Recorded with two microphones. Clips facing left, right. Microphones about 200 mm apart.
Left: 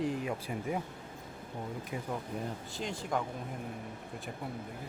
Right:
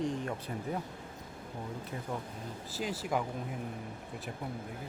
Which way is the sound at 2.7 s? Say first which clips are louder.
Right 3 dB; 5° right (ahead or behind).